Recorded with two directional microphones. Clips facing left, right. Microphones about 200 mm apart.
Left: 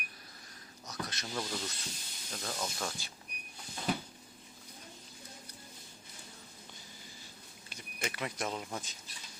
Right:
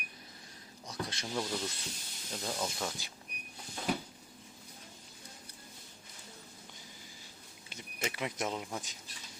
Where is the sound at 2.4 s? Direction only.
10° right (ahead or behind).